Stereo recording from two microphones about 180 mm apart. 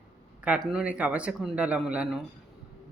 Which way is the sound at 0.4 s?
5° right (ahead or behind).